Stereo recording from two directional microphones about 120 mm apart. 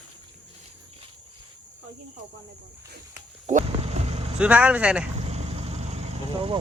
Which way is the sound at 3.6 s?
60° right (ahead or behind).